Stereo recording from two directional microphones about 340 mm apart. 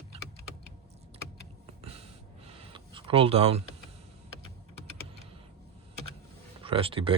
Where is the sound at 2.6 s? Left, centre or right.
Centre.